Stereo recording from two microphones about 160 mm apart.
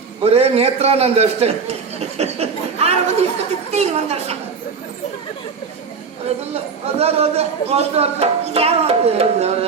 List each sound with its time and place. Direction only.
0.3 s speech: 40° right (ahead or behind)
6.5 s speech: 40° right (ahead or behind)